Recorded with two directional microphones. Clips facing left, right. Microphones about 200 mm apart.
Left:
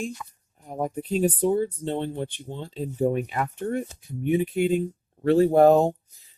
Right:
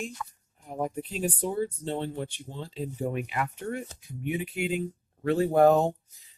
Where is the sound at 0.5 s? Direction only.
40° left (ahead or behind).